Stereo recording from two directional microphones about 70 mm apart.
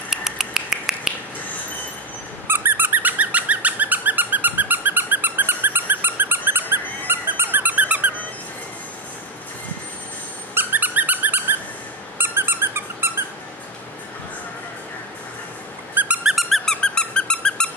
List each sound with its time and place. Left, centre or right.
0.1 s finger snapping: centre
2.4 s dog: right
10.5 s dog: right
12.2 s squeak: right
15.9 s squeak: right
16.3 s squeak: centre